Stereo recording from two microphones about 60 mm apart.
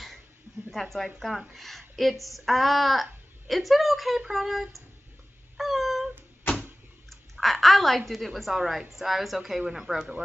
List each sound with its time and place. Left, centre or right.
0.7 s a woman's voice: centre
5.6 s cat: centre
7.1 s a woman's voice: centre